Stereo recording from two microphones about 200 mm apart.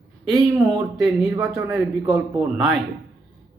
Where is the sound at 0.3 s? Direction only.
Centre (ahead or behind).